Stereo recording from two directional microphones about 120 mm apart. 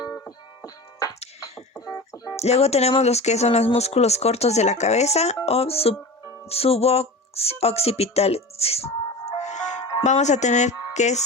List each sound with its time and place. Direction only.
0.3 s music: 30° left (ahead or behind)
2.3 s speech: 60° left (ahead or behind)
9.4 s music: 80° left
10.0 s speech: 80° left